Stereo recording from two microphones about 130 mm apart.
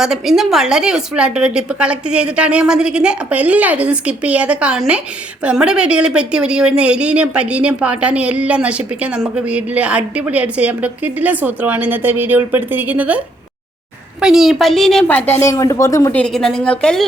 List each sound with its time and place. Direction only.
0.0 s a woman's voice: 5° right (ahead or behind)
15.1 s a woman's voice: 20° left (ahead or behind)
16.1 s a woman's voice: 5° left (ahead or behind)